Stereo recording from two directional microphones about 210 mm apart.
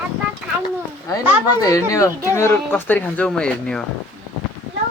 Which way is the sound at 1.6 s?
15° left (ahead or behind).